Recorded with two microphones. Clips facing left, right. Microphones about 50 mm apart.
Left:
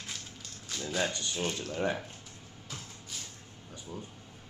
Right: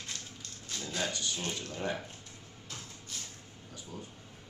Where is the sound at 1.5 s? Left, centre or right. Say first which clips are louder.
Left 3 dB; centre.